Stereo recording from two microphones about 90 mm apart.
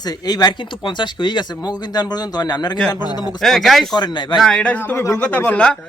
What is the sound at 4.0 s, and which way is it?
Speech, 55° left (ahead or behind).